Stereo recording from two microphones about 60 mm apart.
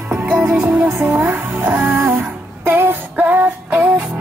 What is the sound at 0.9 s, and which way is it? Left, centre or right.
Music, right.